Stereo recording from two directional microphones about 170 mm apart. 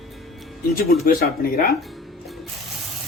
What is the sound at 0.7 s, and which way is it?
Speech, 60° left (ahead or behind).